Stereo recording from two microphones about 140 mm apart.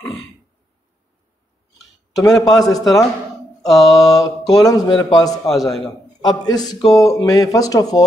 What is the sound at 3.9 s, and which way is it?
Speech, 25° left (ahead or behind).